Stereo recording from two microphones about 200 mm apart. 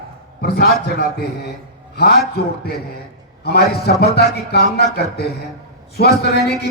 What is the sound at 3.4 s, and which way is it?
A man's voice, 55° left (ahead or behind).